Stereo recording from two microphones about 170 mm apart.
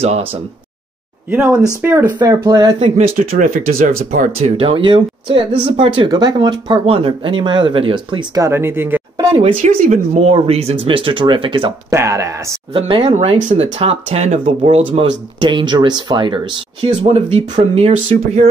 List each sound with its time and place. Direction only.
0.0 s speech: 35° right (ahead or behind)
1.3 s speech: 10° right (ahead or behind)
2.1 s speech: 25° right (ahead or behind)
3.2 s speech: 55° right (ahead or behind)
4.4 s speech: 30° right (ahead or behind)
8.5 s speech: 15° right (ahead or behind)
9.1 s a sound: 25° right (ahead or behind)
9.4 s speech: 40° right (ahead or behind)
11.9 s speech: 15° right (ahead or behind)
12.7 s speech: 30° right (ahead or behind)